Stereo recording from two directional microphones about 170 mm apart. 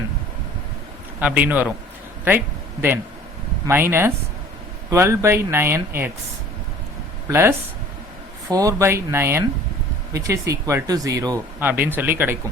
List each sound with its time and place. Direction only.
1.2 s speech: 10° right (ahead or behind)
3.7 s speech: 15° right (ahead or behind)
7.3 s speech: 15° right (ahead or behind)
11.6 s speech: 10° right (ahead or behind)